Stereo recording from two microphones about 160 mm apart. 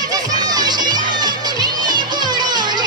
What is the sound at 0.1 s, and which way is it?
Music, 25° right (ahead or behind).